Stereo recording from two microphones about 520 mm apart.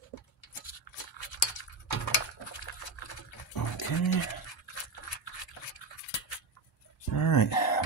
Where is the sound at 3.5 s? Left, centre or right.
Left.